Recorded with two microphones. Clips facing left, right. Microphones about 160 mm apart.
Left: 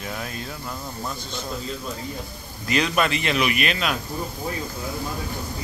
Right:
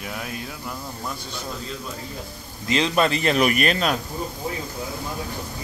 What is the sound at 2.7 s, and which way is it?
Speech, 25° right (ahead or behind).